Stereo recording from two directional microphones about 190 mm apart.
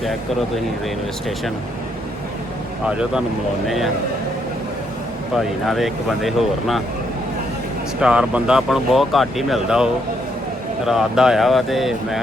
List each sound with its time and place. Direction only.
2.8 s speech: 5° right (ahead or behind)
5.3 s speech: centre (ahead or behind)
8.0 s speech: 5° right (ahead or behind)